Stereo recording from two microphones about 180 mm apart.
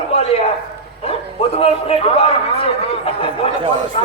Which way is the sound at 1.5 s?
35° left (ahead or behind).